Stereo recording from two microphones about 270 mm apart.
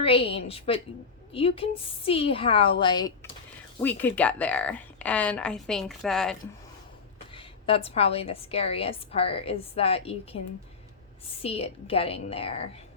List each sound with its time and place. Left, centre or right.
0.0 s a woman's voice: left; by 6.3 s centre
7.3 s a woman's voice: centre
11.4 s a woman's voice: left